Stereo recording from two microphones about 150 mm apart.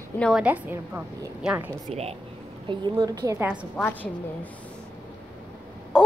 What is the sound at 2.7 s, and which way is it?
Speech, 30° right (ahead or behind).